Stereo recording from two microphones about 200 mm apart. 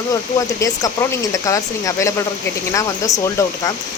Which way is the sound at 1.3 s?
15° left (ahead or behind).